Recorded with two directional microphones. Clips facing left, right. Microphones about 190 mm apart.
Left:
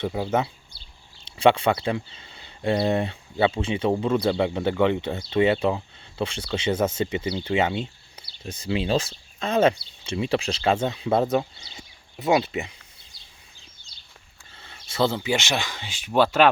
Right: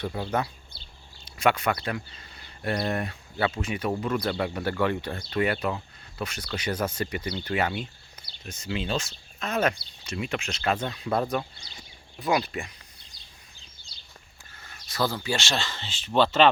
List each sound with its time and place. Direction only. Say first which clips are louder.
0.0 s speech: left 4 dB; 15° left (ahead or behind)
14.6 s speech: left 5 dB; 25° left (ahead or behind); by 16.5 s 10° left (ahead or behind)